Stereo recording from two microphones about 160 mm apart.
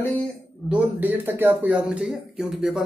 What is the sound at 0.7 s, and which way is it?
Speech, 10° right (ahead or behind).